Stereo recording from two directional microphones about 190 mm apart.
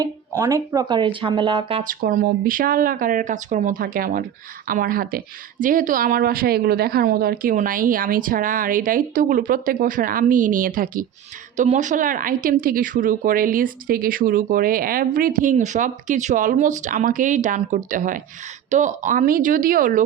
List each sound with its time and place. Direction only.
0.0 s speech: 15° right (ahead or behind)
1.8 s speech: 45° right (ahead or behind)